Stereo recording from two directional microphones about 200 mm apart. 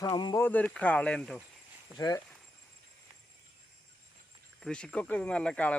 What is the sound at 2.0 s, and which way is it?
Speech, 20° left (ahead or behind).